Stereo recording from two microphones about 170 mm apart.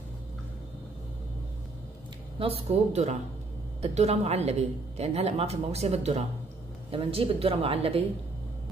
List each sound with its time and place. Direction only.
2.3 s a woman's voice: 35° right (ahead or behind)